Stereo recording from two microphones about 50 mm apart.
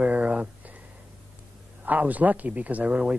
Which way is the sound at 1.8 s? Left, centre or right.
Right.